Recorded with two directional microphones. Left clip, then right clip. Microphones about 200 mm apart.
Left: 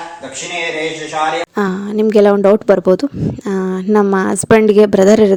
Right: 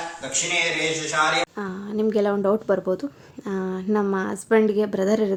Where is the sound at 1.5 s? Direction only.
45° left (ahead or behind).